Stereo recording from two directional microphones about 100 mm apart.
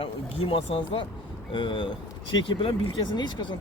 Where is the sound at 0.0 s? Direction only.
70° left (ahead or behind).